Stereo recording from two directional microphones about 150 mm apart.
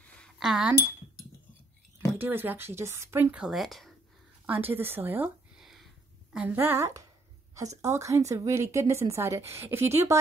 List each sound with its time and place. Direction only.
0.4 s speech: 5° right (ahead or behind)
2.1 s a woman's voice: 15° right (ahead or behind)
4.5 s a woman's voice: 15° right (ahead or behind)
5.6 s a sound: centre (ahead or behind)
6.3 s a woman's voice: 10° right (ahead or behind)